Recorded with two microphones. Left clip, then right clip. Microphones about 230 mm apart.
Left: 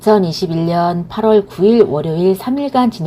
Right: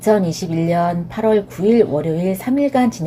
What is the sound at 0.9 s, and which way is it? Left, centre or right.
Speech, centre.